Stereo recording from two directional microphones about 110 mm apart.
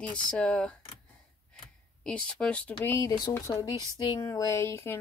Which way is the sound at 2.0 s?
10° left (ahead or behind).